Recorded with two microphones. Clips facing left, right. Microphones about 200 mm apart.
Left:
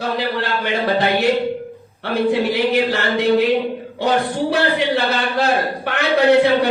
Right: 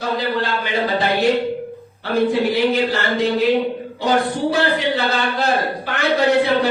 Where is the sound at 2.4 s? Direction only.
60° left (ahead or behind).